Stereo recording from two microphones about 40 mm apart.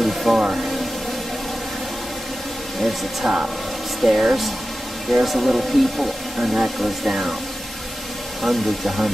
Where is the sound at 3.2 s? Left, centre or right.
Centre.